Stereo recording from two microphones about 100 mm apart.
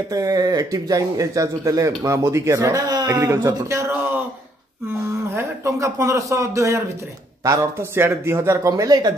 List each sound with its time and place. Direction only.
0.1 s speech: 40° right (ahead or behind)
5.3 s speech: 25° right (ahead or behind)